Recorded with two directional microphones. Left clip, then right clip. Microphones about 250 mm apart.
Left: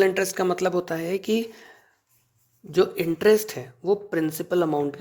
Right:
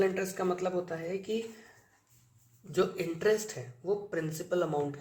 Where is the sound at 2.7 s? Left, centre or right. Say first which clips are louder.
Left 9 dB; left.